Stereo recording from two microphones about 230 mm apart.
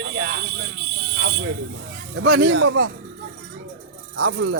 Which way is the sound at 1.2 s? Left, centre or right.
Right.